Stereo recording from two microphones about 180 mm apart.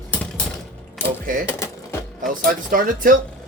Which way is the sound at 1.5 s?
15° left (ahead or behind).